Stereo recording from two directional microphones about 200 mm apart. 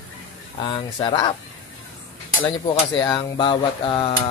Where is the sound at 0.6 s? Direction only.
25° left (ahead or behind).